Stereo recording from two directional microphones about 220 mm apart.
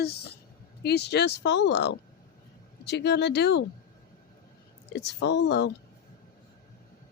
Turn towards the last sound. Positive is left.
turn(degrees=50)  # may be behind; listen again after turning